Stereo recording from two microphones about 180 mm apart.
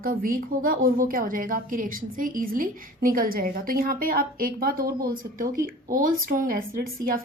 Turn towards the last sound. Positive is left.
turn(degrees=-50)  # may be behind; listen again after turning